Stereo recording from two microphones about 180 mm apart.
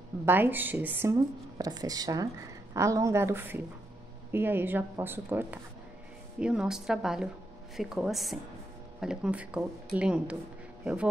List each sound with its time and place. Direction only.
0.2 s a woman's voice: 10° right (ahead or behind)
1.1 s a woman's voice: 20° right (ahead or behind); by 11.1 s 5° right (ahead or behind)